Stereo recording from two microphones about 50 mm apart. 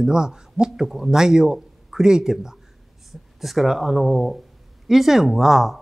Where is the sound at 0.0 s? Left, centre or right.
Centre.